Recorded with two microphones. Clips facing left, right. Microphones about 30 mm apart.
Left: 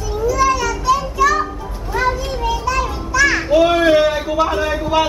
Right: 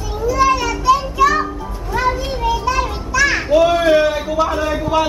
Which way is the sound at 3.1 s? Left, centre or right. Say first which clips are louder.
Left 1 dB; centre.